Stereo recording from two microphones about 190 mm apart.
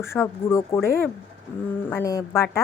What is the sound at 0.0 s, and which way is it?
A woman's voice, 15° left (ahead or behind).